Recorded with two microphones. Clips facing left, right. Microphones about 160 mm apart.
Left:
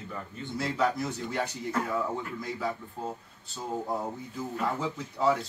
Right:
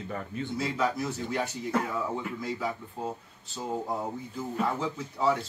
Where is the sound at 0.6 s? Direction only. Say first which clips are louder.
Left 2 dB; 5° right (ahead or behind).